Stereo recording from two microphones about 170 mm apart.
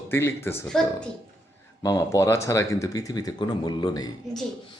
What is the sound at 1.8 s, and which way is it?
Speech, 20° left (ahead or behind).